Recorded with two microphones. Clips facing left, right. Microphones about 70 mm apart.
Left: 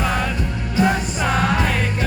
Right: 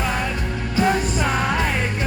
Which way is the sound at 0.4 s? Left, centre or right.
Centre.